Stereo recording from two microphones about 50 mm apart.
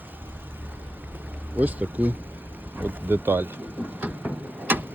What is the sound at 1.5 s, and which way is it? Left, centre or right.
Speech, right.